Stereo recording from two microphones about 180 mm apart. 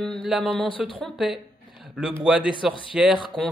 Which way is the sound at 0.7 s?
30° left (ahead or behind).